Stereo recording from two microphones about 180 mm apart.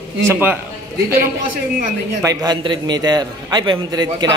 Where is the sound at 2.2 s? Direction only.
25° right (ahead or behind).